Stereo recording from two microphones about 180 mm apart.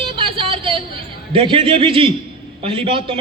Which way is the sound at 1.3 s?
30° right (ahead or behind).